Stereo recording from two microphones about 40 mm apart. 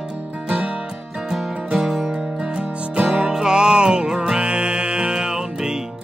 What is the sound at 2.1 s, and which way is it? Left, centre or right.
Music, right.